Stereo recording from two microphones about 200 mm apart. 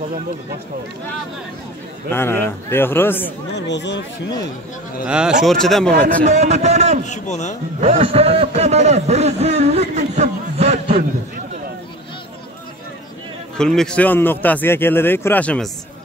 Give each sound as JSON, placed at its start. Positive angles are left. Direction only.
{"t": 2.1, "sound": "speech", "side_deg": 10}
{"t": 3.5, "sound": "speech", "side_deg": 60}
{"t": 5.0, "sound": "speech", "side_deg": -5}
{"t": 6.2, "sound": "a man's voice", "side_deg": -35}
{"t": 7.1, "sound": "speech", "side_deg": 35}
{"t": 7.8, "sound": "a man's voice", "side_deg": -30}
{"t": 13.6, "sound": "speech", "side_deg": 5}